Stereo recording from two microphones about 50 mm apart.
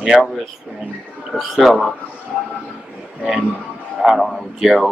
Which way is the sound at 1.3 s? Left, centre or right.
Centre.